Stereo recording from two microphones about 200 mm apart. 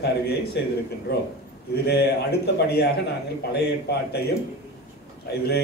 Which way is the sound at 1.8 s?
55° left (ahead or behind).